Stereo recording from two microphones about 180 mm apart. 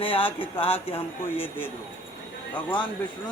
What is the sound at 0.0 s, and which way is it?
Speech, 30° left (ahead or behind).